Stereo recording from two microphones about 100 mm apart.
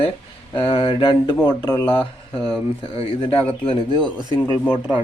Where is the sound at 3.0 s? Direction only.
65° left (ahead or behind).